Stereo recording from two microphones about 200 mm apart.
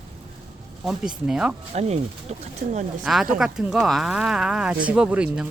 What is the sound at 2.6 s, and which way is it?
Speech, 35° right (ahead or behind).